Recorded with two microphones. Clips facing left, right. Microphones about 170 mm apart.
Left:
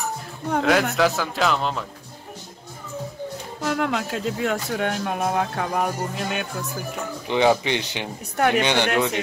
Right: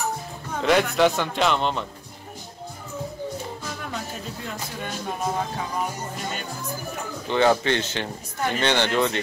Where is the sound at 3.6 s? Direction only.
75° left (ahead or behind).